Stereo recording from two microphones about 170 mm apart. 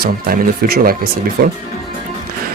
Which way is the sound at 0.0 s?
60° right (ahead or behind).